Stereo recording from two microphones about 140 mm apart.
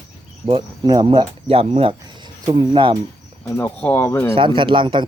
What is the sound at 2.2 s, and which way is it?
Cricket, 25° right (ahead or behind).